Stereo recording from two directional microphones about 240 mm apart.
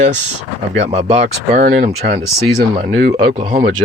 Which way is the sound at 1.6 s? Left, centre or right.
Right.